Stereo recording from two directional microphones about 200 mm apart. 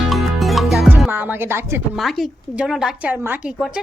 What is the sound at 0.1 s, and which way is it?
Music, centre (ahead or behind).